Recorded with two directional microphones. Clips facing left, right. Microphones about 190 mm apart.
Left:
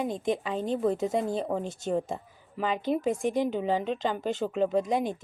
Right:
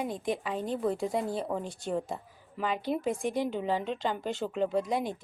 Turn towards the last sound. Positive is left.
turn(degrees=20)  # may be behind; listen again after turning